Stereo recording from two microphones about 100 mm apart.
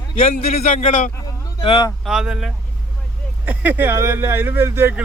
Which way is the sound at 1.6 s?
60° left (ahead or behind).